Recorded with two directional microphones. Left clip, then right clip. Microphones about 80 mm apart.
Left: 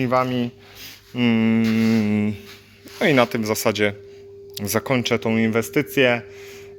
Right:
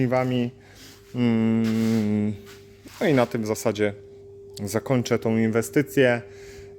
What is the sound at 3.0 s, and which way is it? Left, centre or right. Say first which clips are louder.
Speech: left 4 dB; centre.